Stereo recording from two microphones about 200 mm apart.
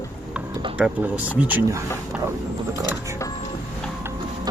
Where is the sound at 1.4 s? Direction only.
10° right (ahead or behind).